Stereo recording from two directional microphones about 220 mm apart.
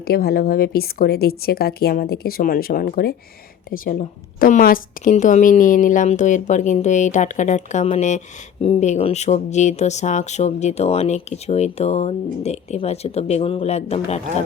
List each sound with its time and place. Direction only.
0.0 s a woman's voice: 45° left (ahead or behind); by 14.2 s 30° left (ahead or behind)